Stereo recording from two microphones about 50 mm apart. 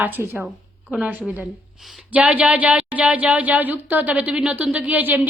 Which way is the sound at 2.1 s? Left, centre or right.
Right.